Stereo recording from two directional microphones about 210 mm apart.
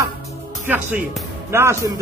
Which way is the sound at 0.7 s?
10° right (ahead or behind).